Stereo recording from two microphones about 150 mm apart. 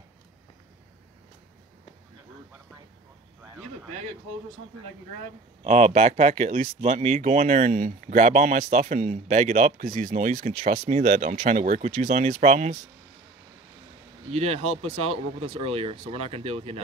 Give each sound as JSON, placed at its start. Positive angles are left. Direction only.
{"t": 5.6, "sound": "speech", "side_deg": -50}
{"t": 14.3, "sound": "speech", "side_deg": -45}